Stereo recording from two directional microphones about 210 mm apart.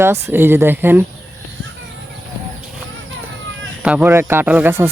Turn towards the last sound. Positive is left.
turn(degrees=-10)  # may be behind; listen again after turning